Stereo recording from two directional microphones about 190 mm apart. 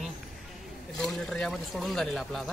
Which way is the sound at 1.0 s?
Centre (ahead or behind).